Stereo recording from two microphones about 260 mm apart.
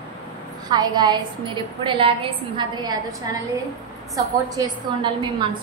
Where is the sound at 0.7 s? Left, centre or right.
Centre.